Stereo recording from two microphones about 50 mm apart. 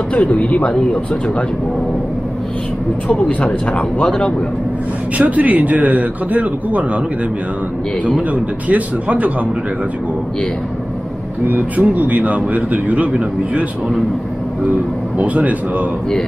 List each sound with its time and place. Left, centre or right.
0.1 s speech: left
3.1 s speech: left
5.1 s a man's voice: right
8.6 s a man's voice: right
11.4 s a man's voice: right
15.1 s a man's voice: right